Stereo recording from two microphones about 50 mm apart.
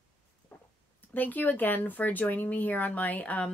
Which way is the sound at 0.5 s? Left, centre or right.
Left.